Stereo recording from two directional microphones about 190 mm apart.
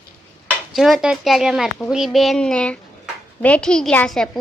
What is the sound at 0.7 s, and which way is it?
A child's voice, centre (ahead or behind).